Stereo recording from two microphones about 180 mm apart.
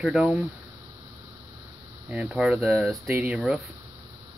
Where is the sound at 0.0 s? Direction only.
5° right (ahead or behind).